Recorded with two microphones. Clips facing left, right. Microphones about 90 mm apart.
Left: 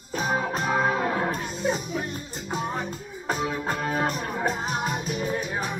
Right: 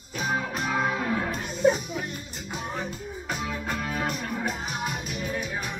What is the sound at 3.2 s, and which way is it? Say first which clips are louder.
Music: left 5 dB; 35° left (ahead or behind).